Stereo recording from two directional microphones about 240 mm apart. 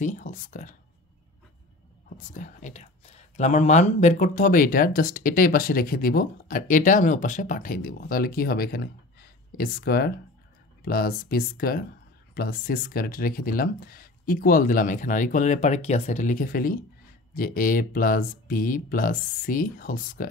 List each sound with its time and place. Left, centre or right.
0.0 s speech: left
2.0 s speech: left